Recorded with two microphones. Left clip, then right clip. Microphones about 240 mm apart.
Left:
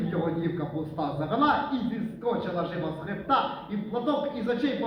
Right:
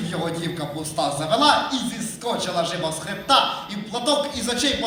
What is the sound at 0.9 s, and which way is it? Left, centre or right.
A man's voice, right.